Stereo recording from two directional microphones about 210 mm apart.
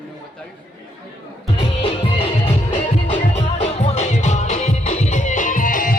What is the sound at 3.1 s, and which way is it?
Music, 30° left (ahead or behind).